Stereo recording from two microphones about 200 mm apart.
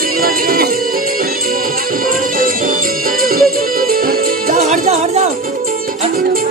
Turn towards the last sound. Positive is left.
turn(degrees=-45)  # may be behind; listen again after turning